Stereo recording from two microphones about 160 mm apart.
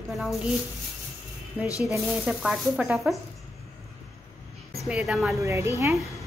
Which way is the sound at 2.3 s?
5° right (ahead or behind).